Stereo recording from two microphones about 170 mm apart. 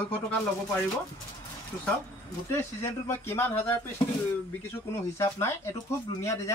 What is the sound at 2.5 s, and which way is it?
Speech, 15° left (ahead or behind).